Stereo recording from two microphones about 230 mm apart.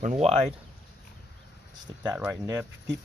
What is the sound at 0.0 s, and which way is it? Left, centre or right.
Speech, right.